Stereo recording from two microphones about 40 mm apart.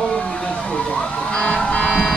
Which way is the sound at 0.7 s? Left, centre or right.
Left.